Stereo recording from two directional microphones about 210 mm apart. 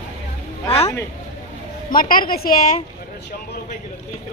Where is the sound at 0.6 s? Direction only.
30° left (ahead or behind).